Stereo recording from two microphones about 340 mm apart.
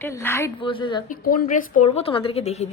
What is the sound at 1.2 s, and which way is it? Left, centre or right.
A woman's voice, left.